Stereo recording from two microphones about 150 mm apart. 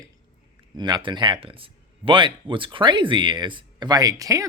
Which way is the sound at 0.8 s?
30° right (ahead or behind).